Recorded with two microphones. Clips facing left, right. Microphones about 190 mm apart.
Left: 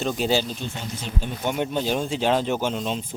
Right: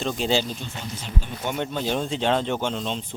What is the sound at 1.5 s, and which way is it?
Speech, 10° left (ahead or behind).